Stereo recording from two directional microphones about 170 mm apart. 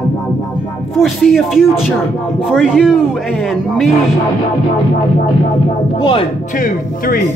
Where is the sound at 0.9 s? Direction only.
Centre (ahead or behind).